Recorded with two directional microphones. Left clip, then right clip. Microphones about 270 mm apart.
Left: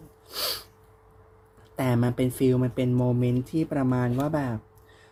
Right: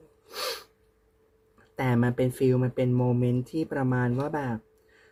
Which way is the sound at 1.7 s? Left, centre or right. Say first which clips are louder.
Even; left.